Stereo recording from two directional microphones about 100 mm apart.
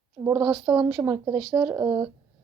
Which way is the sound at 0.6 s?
45° right (ahead or behind).